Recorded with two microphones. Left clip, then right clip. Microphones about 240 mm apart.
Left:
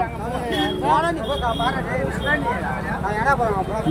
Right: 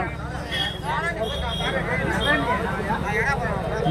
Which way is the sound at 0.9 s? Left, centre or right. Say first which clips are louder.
Left 10 dB; left.